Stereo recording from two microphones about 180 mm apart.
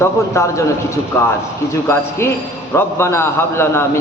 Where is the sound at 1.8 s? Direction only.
15° left (ahead or behind).